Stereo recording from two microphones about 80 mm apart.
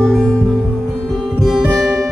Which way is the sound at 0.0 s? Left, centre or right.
Centre.